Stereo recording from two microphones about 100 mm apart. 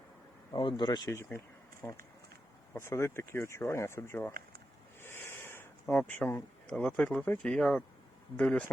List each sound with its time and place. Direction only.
0.5 s speech: 45° left (ahead or behind)
1.1 s speech: 25° left (ahead or behind)
4.9 s a sound: 25° left (ahead or behind)
5.9 s speech: 20° left (ahead or behind)
6.7 s speech: 10° left (ahead or behind)